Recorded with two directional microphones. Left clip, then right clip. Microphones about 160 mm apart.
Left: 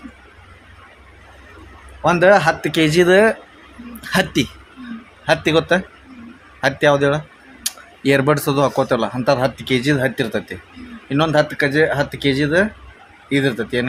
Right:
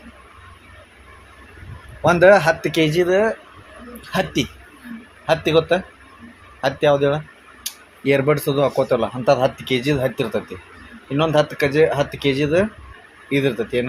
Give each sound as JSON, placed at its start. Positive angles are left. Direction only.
{"t": 2.0, "sound": "speech", "side_deg": 5}
{"t": 2.9, "sound": "speech", "side_deg": 35}
{"t": 4.1, "sound": "speech", "side_deg": 20}
{"t": 7.6, "sound": "tick-tock", "side_deg": 20}
{"t": 8.8, "sound": "speech", "side_deg": 20}